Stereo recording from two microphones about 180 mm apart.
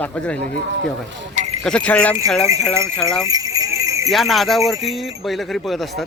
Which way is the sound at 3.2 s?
20° right (ahead or behind).